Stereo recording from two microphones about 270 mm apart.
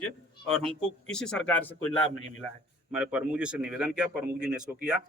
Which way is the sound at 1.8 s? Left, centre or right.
Left.